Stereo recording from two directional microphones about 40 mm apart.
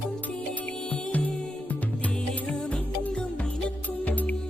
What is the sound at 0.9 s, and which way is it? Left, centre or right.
Music, left.